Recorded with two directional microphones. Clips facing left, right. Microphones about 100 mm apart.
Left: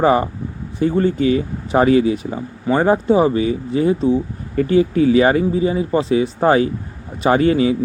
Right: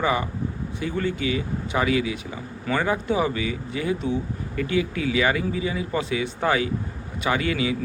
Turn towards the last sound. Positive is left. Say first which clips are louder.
# left 10 dB
turn(degrees=35)  # may be behind; listen again after turning